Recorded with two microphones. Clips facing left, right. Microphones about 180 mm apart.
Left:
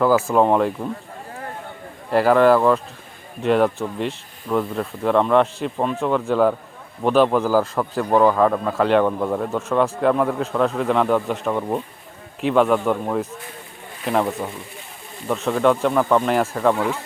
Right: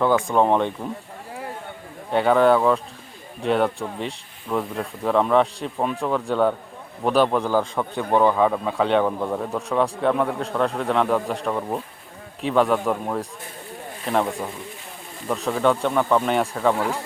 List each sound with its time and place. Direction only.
0.0 s speech: 5° left (ahead or behind)
2.0 s speech: centre (ahead or behind)